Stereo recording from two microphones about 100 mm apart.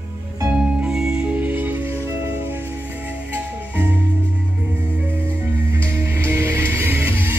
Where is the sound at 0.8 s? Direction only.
5° right (ahead or behind).